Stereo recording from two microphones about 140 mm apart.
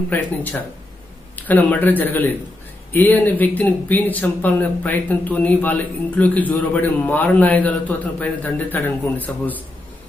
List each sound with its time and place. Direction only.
0.1 s speech: 10° left (ahead or behind)